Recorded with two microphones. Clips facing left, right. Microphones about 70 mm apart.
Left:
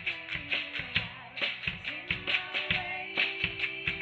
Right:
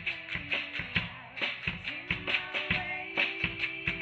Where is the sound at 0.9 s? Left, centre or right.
Centre.